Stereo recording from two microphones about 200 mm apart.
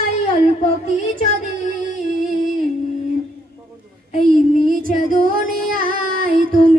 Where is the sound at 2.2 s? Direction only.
45° right (ahead or behind).